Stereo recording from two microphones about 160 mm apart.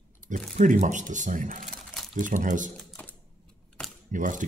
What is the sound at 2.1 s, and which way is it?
Speech, 55° right (ahead or behind).